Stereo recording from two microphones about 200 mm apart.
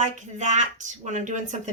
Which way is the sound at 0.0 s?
35° right (ahead or behind).